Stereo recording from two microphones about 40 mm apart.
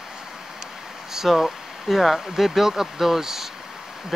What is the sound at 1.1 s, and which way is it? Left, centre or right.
Speech, centre.